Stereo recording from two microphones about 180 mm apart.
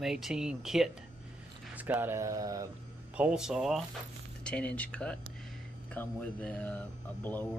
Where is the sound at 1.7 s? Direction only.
10° right (ahead or behind).